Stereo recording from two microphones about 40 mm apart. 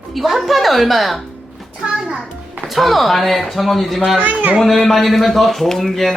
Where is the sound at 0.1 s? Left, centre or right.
Centre.